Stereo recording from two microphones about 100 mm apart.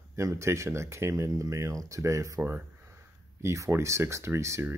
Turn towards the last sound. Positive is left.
turn(degrees=-30)  # may be behind; listen again after turning